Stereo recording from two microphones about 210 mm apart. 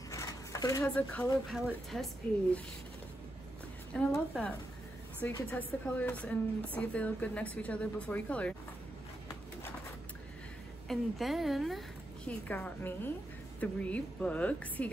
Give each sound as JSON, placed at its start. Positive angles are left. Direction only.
{"t": 0.1, "sound": "a sound", "side_deg": 15}
{"t": 0.8, "sound": "speech", "side_deg": 5}
{"t": 3.9, "sound": "speech", "side_deg": 5}
{"t": 10.9, "sound": "speech", "side_deg": 0}